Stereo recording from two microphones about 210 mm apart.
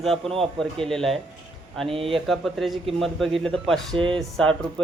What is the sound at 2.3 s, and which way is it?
A man's voice, centre (ahead or behind).